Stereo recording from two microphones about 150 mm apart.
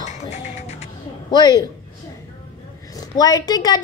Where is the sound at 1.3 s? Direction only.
30° left (ahead or behind).